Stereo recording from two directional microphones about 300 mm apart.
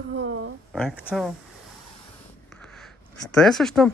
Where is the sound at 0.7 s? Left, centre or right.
Centre.